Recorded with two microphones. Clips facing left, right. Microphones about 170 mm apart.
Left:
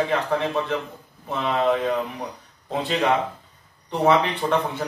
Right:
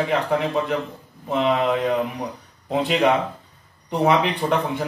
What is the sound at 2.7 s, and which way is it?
A man's voice, 15° right (ahead or behind).